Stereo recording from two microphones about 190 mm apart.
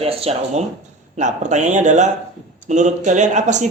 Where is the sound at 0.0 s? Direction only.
30° right (ahead or behind).